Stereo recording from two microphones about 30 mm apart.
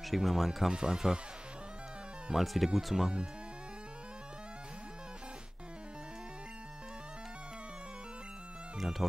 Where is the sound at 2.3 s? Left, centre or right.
Centre.